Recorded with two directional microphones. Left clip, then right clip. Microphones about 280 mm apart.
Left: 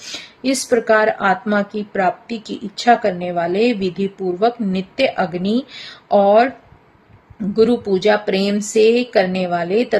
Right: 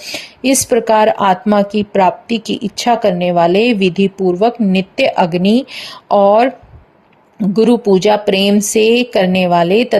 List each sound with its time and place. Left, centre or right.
0.0 s speech: right